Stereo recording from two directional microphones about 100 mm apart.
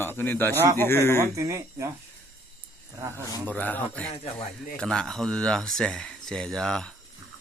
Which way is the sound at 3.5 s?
15° left (ahead or behind).